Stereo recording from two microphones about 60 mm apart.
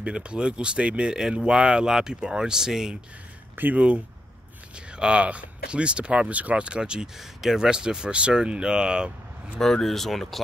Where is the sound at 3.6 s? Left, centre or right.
Right.